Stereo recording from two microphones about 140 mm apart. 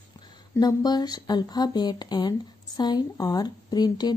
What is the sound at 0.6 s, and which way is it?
Speech, 30° left (ahead or behind).